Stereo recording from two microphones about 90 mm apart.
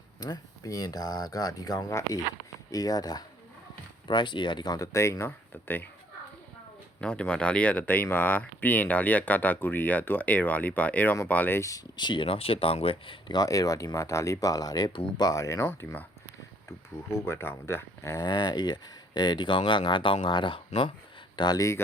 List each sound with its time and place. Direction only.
0.2 s speech: 45° left (ahead or behind)
4.1 s speech: 60° left (ahead or behind); by 5.9 s 20° left (ahead or behind)
7.0 s speech: 15° left (ahead or behind)
11.6 s speech: 40° left (ahead or behind)
11.9 s speech: 60° left (ahead or behind); by 13.3 s 85° left
13.3 s speech: 40° left (ahead or behind); by 18.1 s 25° left (ahead or behind)
18.1 s speech: 50° left (ahead or behind); by 20.9 s 65° left (ahead or behind)
21.3 s speech: 55° left (ahead or behind)